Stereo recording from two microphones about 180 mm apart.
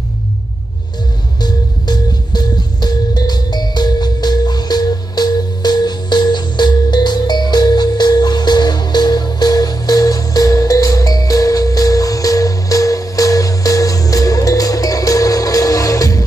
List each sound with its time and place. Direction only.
1.4 s music: 25° left (ahead or behind)